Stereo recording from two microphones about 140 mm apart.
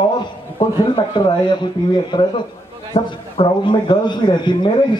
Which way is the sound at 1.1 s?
35° left (ahead or behind).